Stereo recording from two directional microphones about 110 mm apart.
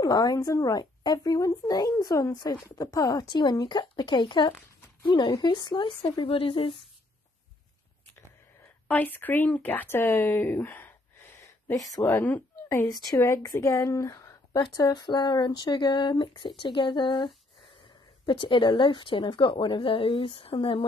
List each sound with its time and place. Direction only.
0.0 s speech: 35° left (ahead or behind); by 6.8 s 50° left (ahead or behind)
8.8 s speech: 15° left (ahead or behind)
11.4 s a woman's voice: 30° left (ahead or behind); by 20.8 s 50° left (ahead or behind)